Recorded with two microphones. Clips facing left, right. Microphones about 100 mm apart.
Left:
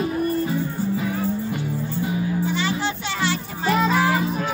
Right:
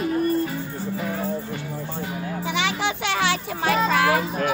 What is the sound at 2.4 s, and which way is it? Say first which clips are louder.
Music: left 1 dB; 90° right.